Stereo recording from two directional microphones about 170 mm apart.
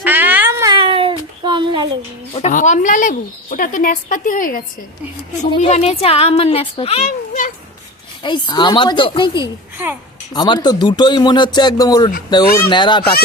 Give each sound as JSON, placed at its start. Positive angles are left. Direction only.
{"t": 0.0, "sound": "a sound", "side_deg": -10}
{"t": 0.7, "sound": "a sound", "side_deg": -30}
{"t": 2.3, "sound": "speech", "side_deg": 45}
{"t": 5.5, "sound": "speech", "side_deg": 40}
{"t": 8.2, "sound": "speech", "side_deg": 25}
{"t": 9.7, "sound": "speech", "side_deg": -10}
{"t": 10.3, "sound": "speech", "side_deg": 25}